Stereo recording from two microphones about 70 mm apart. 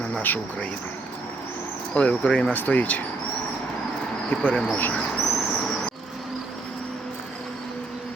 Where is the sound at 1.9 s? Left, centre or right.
Centre.